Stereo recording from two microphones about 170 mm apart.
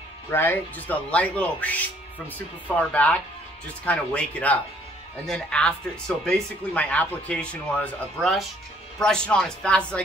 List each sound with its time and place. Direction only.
0.3 s speech: 10° left (ahead or behind)
2.9 s speech: 10° left (ahead or behind)